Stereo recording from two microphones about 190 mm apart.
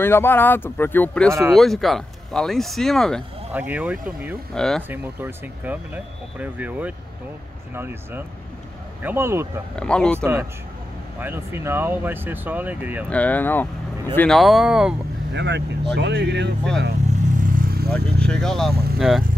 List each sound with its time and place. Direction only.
0.0 s speech: 10° left (ahead or behind)
3.5 s speech: 10° right (ahead or behind)
4.6 s speech: 5° left (ahead or behind)
4.8 s speech: 10° right (ahead or behind)
9.8 s speech: 5° left (ahead or behind)
10.1 s speech: 15° right (ahead or behind)
13.1 s speech: 10° left (ahead or behind)
15.3 s speech: 65° right (ahead or behind)
17.4 s vehicle: 45° right (ahead or behind)
17.9 s speech: 5° left (ahead or behind)